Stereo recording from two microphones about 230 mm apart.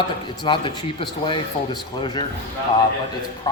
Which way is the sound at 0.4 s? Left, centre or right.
Left.